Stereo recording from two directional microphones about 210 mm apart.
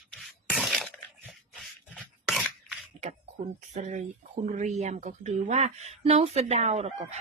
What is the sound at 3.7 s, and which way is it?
Speech, 35° right (ahead or behind).